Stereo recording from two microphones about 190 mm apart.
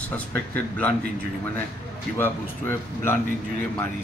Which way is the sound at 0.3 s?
10° left (ahead or behind).